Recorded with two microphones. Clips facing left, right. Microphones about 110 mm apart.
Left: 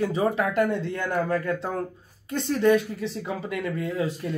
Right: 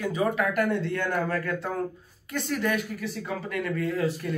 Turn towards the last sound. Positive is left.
turn(degrees=20)  # may be behind; listen again after turning